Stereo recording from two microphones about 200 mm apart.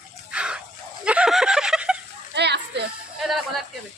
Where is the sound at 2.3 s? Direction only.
55° right (ahead or behind).